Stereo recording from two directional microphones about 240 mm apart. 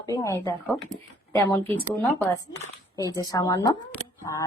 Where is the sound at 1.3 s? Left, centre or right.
Centre.